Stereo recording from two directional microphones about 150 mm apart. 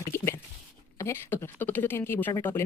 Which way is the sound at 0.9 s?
15° left (ahead or behind).